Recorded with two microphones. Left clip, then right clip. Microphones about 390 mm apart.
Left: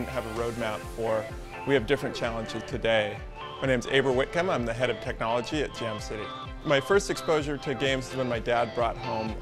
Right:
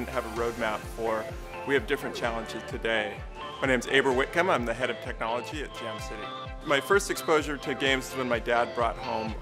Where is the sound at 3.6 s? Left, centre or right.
Left.